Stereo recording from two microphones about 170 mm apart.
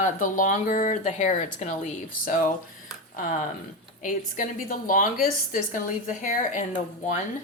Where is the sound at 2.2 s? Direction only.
55° left (ahead or behind).